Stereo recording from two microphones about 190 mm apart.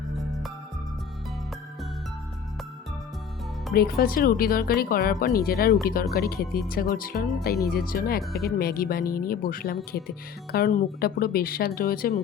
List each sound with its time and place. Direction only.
3.7 s speech: 55° left (ahead or behind)